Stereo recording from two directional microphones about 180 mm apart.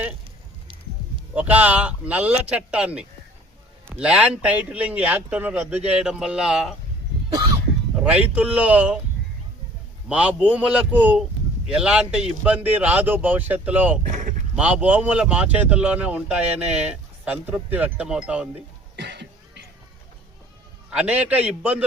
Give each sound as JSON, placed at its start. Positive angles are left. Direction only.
{"t": 1.3, "sound": "speech", "side_deg": -10}
{"t": 8.0, "sound": "speech", "side_deg": -10}
{"t": 10.1, "sound": "speech", "side_deg": -5}
{"t": 14.1, "sound": "speech", "side_deg": -45}
{"t": 14.5, "sound": "speech", "side_deg": -5}
{"t": 18.9, "sound": "cough", "side_deg": -70}
{"t": 20.9, "sound": "speech", "side_deg": -5}